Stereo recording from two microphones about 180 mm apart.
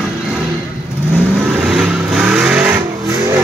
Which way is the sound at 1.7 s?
Centre (ahead or behind).